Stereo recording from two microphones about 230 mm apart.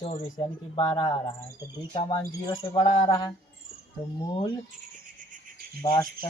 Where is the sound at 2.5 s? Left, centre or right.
Left.